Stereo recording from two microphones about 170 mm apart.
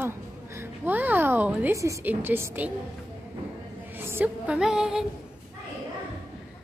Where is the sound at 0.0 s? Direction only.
15° right (ahead or behind).